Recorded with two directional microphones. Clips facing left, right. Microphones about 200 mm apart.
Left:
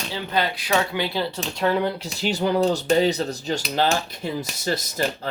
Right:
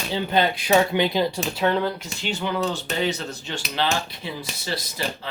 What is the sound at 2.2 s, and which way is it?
Speech, 40° left (ahead or behind).